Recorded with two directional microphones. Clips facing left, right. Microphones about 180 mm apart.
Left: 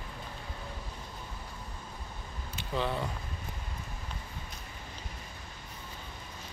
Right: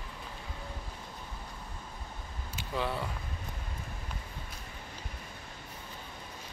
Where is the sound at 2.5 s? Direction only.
5° right (ahead or behind).